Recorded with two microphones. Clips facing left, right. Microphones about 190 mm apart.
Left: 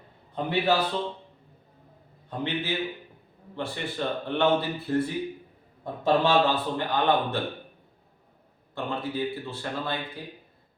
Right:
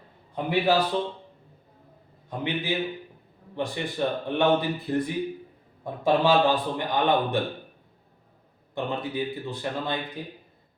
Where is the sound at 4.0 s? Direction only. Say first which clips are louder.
Right 1 dB; 15° right (ahead or behind).